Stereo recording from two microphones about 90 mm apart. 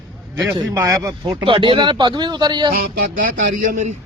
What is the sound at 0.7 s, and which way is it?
Speech, 35° right (ahead or behind).